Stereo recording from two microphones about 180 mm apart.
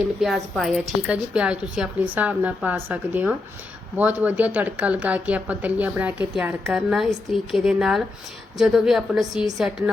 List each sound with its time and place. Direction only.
0.2 s a woman's voice: centre (ahead or behind)